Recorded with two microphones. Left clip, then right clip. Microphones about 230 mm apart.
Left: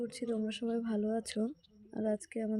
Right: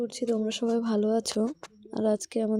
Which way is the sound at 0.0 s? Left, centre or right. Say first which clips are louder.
Right 8 dB; centre.